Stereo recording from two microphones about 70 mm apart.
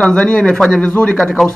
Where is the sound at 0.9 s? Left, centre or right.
Centre.